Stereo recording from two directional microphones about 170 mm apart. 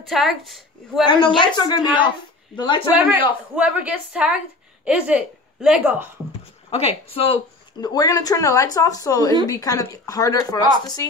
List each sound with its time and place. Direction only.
0.0 s a woman's voice: centre (ahead or behind)
1.0 s a woman's voice: 30° left (ahead or behind)
2.9 s a woman's voice: 10° right (ahead or behind)
6.7 s speech: 35° left (ahead or behind)
7.8 s a woman's voice: 20° left (ahead or behind)